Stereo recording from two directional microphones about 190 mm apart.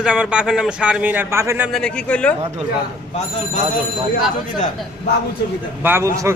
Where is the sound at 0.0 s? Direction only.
5° right (ahead or behind).